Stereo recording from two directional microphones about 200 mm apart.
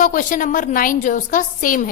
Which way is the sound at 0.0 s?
40° left (ahead or behind).